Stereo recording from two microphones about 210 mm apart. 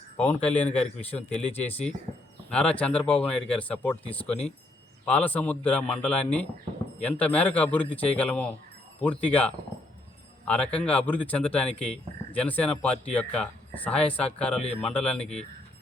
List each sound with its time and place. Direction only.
0.2 s speech: 5° left (ahead or behind)
1.4 s speech: 30° left (ahead or behind)
2.5 s speech: 5° left (ahead or behind)
15.2 s speech: 30° left (ahead or behind)